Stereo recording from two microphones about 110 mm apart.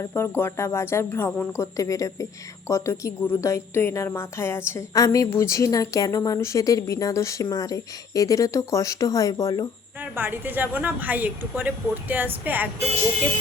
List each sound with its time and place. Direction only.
0.0 s a woman's voice: 20° left (ahead or behind)
10.0 s a woman's voice: 15° right (ahead or behind)